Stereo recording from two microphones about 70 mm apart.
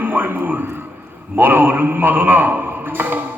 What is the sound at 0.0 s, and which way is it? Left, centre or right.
A man's voice, right.